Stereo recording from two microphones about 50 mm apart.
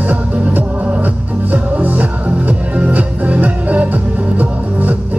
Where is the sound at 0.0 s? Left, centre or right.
Right.